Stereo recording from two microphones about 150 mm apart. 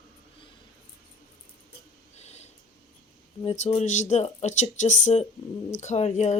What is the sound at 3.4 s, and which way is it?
Speech, 50° left (ahead or behind).